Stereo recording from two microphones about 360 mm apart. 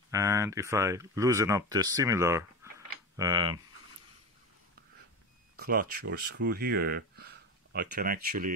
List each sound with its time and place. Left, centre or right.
0.1 s speech: centre
5.6 s speech: right